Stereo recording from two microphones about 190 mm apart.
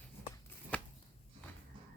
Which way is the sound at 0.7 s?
5° left (ahead or behind).